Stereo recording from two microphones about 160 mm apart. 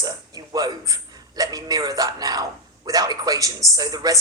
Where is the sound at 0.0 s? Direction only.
25° right (ahead or behind).